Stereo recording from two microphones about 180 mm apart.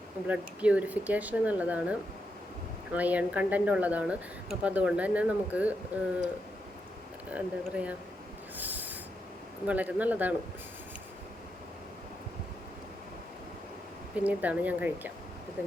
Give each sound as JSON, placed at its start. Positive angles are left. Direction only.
{"t": 0.3, "sound": "speech", "side_deg": -5}
{"t": 7.3, "sound": "speech", "side_deg": -10}
{"t": 8.5, "sound": "snort", "side_deg": -10}
{"t": 9.6, "sound": "speech", "side_deg": -10}
{"t": 14.3, "sound": "speech", "side_deg": -10}